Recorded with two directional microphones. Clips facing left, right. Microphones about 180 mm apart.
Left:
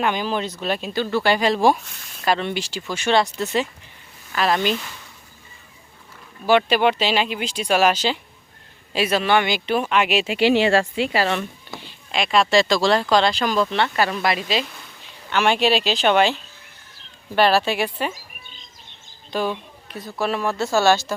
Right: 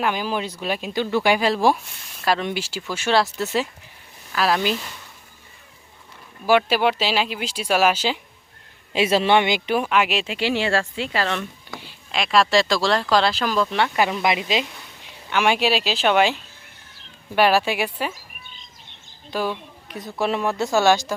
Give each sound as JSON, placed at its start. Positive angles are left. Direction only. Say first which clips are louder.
{"t": 0.0, "sound": "speech", "louder": "left 1 dB", "side_deg": -5}
{"t": 6.4, "sound": "speech", "louder": "left 1 dB", "side_deg": -5}
{"t": 8.9, "sound": "speech", "louder": "right 1 dB", "side_deg": -25}
{"t": 9.6, "sound": "speech", "louder": "even", "side_deg": -10}
{"t": 11.8, "sound": "speech", "louder": "left 2 dB", "side_deg": -5}
{"t": 19.3, "sound": "a sound", "louder": "left 1 dB", "side_deg": -5}
{"t": 20.0, "sound": "speech", "louder": "right 1 dB", "side_deg": -20}